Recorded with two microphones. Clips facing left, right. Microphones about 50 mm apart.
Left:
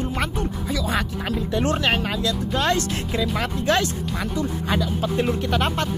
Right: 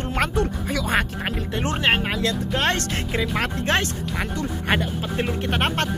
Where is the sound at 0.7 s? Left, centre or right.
Right.